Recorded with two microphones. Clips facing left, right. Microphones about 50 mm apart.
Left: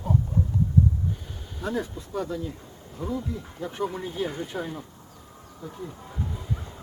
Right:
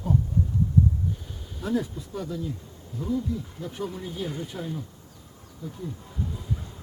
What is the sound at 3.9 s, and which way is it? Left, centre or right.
Speech, left.